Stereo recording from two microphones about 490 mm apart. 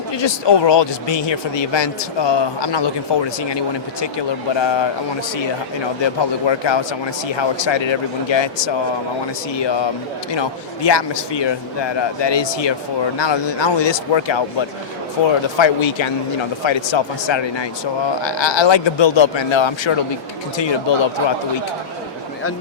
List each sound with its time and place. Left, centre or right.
0.1 s speech: left
6.5 s speech: left
10.8 s speech: left
15.5 s speech: left